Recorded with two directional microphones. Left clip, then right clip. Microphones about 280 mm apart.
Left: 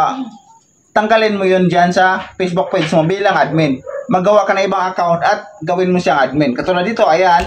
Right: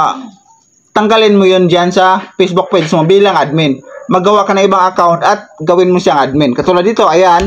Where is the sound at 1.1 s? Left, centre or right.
Centre.